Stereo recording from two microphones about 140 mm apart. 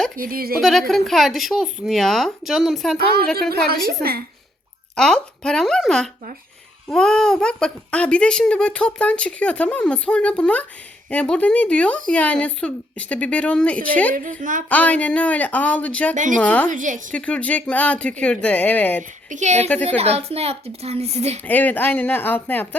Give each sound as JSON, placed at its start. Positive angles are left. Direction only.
{"t": 0.2, "sound": "a woman's voice", "side_deg": -90}
{"t": 0.6, "sound": "speech", "side_deg": 0}
{"t": 4.9, "sound": "speech", "side_deg": 5}
{"t": 14.1, "sound": "a woman's voice", "side_deg": -70}
{"t": 14.7, "sound": "speech", "side_deg": 10}
{"t": 16.1, "sound": "a woman's voice", "side_deg": -65}
{"t": 16.4, "sound": "speech", "side_deg": 10}
{"t": 16.6, "sound": "a woman's voice", "side_deg": -65}
{"t": 17.2, "sound": "speech", "side_deg": 10}
{"t": 19.3, "sound": "a woman's voice", "side_deg": -60}
{"t": 19.6, "sound": "speech", "side_deg": 10}
{"t": 20.0, "sound": "a woman's voice", "side_deg": -45}
{"t": 21.4, "sound": "speech", "side_deg": 10}